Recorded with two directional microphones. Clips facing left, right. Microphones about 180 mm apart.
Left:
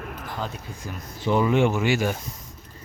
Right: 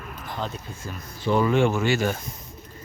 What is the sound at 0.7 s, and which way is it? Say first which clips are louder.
Speech: left 1 dB; 15° left (ahead or behind).